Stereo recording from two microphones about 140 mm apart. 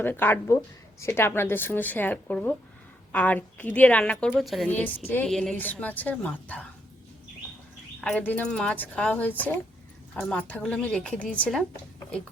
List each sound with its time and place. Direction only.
0.0 s a woman's voice: 15° left (ahead or behind)
4.7 s speech: 15° left (ahead or behind)
8.0 s speech: 10° left (ahead or behind)